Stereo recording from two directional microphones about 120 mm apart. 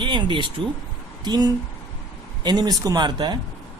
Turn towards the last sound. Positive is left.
turn(degrees=-35)  # may be behind; listen again after turning